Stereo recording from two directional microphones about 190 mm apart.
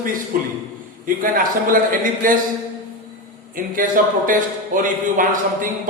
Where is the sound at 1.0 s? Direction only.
45° right (ahead or behind).